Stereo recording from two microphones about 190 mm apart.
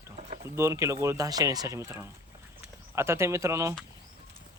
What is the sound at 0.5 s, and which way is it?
Speech, 15° right (ahead or behind).